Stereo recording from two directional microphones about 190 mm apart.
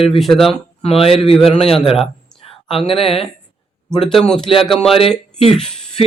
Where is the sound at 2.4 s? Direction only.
30° left (ahead or behind).